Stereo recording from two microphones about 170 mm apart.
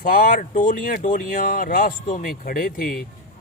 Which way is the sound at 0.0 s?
55° left (ahead or behind).